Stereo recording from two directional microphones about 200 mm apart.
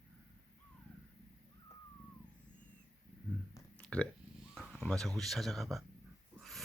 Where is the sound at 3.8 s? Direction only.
5° left (ahead or behind).